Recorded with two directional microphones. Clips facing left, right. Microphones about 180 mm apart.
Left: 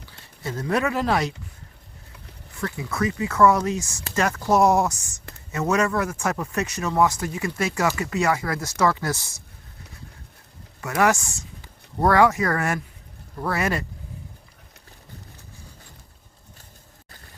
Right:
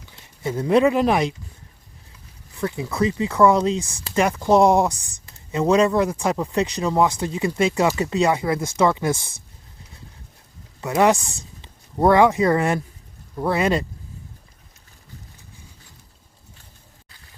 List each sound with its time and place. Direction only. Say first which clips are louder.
0.1 s speech: right 5 dB; 15° right (ahead or behind)
2.6 s speech: right 4 dB; 20° right (ahead or behind)
10.8 s speech: right 3 dB; 20° right (ahead or behind)